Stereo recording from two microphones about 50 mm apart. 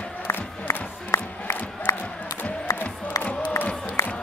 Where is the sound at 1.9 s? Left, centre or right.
Left.